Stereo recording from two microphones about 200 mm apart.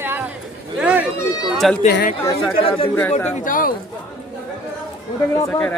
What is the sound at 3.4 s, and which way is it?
Speech, 45° left (ahead or behind).